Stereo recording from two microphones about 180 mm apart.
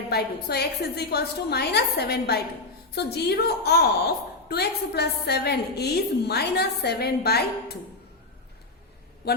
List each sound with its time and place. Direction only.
0.1 s a woman's voice: 65° left (ahead or behind)
9.2 s a man's voice: 65° left (ahead or behind)